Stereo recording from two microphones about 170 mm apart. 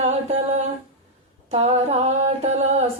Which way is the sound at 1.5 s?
40° right (ahead or behind).